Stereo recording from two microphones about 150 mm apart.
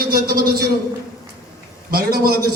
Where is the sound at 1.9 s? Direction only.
90° right.